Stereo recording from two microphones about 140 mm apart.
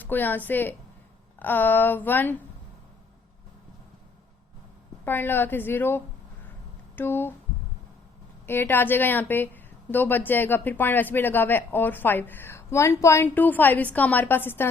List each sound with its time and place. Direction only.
0.0 s a woman's voice: 15° left (ahead or behind)
5.0 s a woman's voice: 15° left (ahead or behind)
8.4 s a woman's voice: 15° left (ahead or behind)